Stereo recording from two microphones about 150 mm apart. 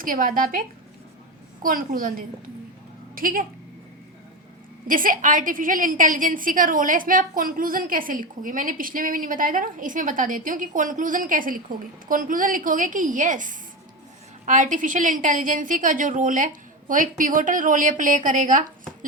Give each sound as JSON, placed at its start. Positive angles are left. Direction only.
{"t": 0.0, "sound": "speech", "side_deg": -65}
{"t": 1.6, "sound": "speech", "side_deg": -65}
{"t": 4.9, "sound": "a woman's voice", "side_deg": -65}